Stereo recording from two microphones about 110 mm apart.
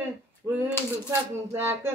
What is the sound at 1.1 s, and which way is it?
Speech, 20° right (ahead or behind).